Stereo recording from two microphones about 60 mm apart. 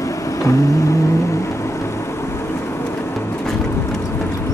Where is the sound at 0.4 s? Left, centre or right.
Left.